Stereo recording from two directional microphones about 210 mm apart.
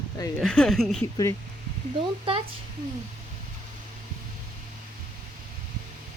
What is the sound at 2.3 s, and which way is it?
Speech, 25° right (ahead or behind).